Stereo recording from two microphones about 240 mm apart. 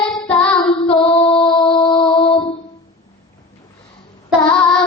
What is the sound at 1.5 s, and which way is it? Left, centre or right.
Music, left.